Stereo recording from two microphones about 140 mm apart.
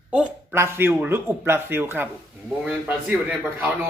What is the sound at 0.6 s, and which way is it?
Speech, 15° right (ahead or behind).